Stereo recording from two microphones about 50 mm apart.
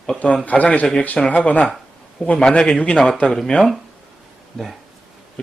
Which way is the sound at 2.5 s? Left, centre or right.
Centre.